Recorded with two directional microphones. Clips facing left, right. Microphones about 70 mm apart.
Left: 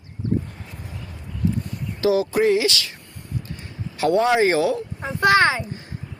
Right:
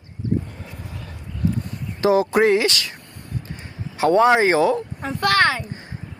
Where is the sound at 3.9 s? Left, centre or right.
Right.